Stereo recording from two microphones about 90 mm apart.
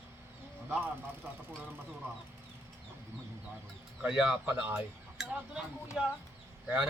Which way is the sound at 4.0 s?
10° right (ahead or behind).